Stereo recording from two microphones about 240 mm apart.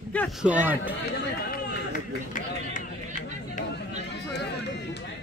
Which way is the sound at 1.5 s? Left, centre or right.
Left.